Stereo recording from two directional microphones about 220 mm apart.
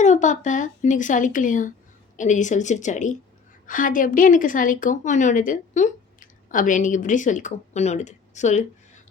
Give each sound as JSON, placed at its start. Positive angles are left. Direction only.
{"t": 0.0, "sound": "a woman's voice", "side_deg": 35}